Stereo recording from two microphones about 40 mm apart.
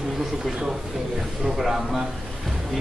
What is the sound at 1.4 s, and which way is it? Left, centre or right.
Speech, centre.